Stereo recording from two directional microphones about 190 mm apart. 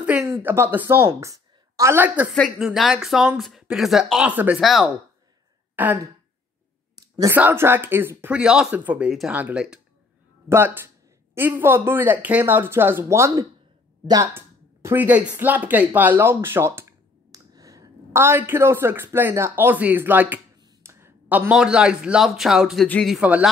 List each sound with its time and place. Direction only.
0.0 s a woman's voice: 10° right (ahead or behind)
7.0 s a sound: 20° right (ahead or behind)
7.3 s a man's voice: 10° right (ahead or behind)